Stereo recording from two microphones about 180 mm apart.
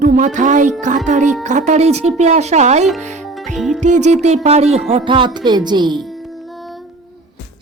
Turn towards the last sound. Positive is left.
turn(degrees=-25)  # may be behind; listen again after turning